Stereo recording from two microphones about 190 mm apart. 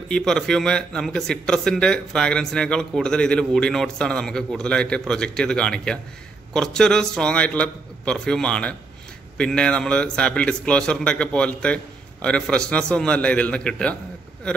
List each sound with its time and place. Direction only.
0.1 s a man's voice: 5° left (ahead or behind)